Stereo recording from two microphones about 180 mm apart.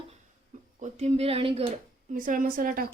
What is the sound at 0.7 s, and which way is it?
Speech, 40° right (ahead or behind).